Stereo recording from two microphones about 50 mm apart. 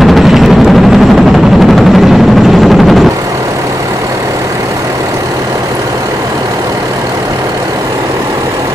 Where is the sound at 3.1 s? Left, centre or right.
Right.